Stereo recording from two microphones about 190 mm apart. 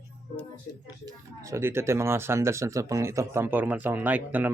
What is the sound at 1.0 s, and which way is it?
Speech, 15° right (ahead or behind).